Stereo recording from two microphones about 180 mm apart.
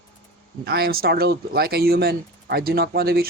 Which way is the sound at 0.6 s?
60° right (ahead or behind).